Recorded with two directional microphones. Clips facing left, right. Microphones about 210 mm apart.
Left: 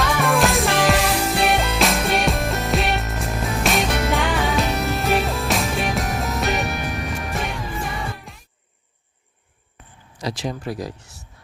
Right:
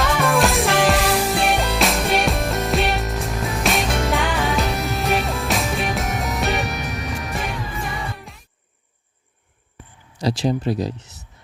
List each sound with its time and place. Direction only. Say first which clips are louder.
0.0 s music: right 1 dB; centre (ahead or behind)
10.2 s speech: right 6 dB; 30° right (ahead or behind)